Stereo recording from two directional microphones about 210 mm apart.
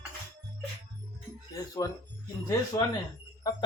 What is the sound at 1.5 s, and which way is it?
Speech, 15° left (ahead or behind).